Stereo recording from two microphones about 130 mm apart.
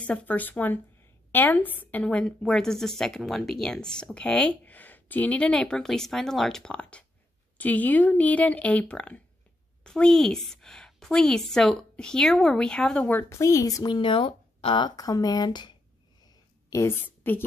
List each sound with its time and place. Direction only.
0.0 s a woman's voice: 10° left (ahead or behind)
13.3 s a woman's voice: 25° left (ahead or behind)
13.8 s speech: 40° left (ahead or behind)
16.7 s a woman's voice: 15° left (ahead or behind)